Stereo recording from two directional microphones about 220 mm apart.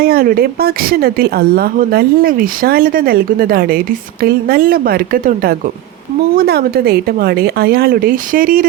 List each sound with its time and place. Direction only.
0.0 s a woman's voice: 40° right (ahead or behind)